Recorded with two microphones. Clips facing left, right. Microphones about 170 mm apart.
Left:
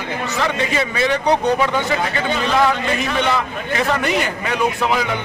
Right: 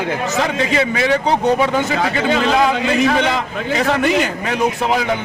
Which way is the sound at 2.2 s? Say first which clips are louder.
Right 2 dB; 90° right.